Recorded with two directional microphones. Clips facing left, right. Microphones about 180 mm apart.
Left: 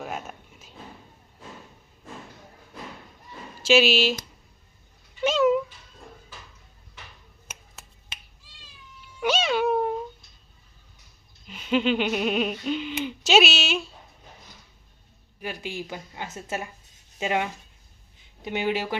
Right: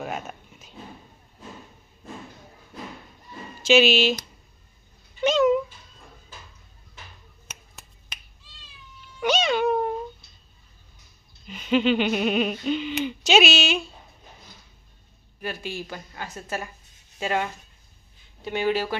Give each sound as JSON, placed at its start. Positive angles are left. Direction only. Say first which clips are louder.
{"t": 0.0, "sound": "a sound", "louder": "right 2 dB", "side_deg": 0}
{"t": 3.6, "sound": "speech", "louder": "right 2 dB", "side_deg": 5}
{"t": 5.2, "sound": "cat", "louder": "right 1 dB", "side_deg": 5}
{"t": 9.2, "sound": "cat", "louder": "right 1 dB", "side_deg": 5}
{"t": 11.4, "sound": "a sound", "louder": "right 2 dB", "side_deg": 5}
{"t": 15.4, "sound": "a woman's voice", "louder": "right 1 dB", "side_deg": 15}